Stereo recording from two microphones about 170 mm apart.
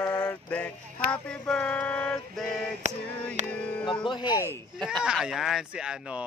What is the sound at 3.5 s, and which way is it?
Music, 5° left (ahead or behind).